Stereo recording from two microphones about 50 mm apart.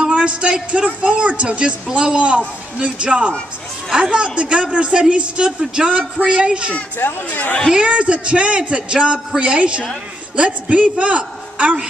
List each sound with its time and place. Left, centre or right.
0.1 s speech: right
7.0 s speech: left
7.7 s speech: right